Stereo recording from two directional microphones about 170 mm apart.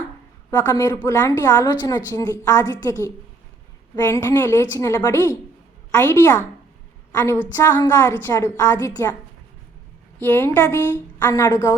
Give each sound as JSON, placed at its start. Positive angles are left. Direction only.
{"t": 0.5, "sound": "a woman's voice", "side_deg": 10}
{"t": 3.9, "sound": "a woman's voice", "side_deg": 15}
{"t": 10.2, "sound": "a woman's voice", "side_deg": 10}